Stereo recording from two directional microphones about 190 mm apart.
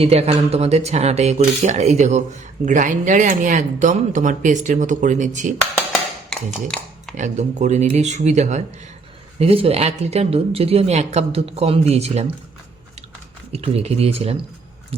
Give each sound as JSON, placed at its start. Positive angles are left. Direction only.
{"t": 0.0, "sound": "speech", "side_deg": -30}
{"t": 5.9, "sound": "a sound", "side_deg": 0}
{"t": 7.2, "sound": "speech", "side_deg": -40}
{"t": 13.5, "sound": "speech", "side_deg": -35}